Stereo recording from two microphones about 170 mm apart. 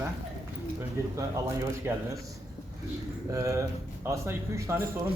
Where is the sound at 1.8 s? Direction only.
15° right (ahead or behind).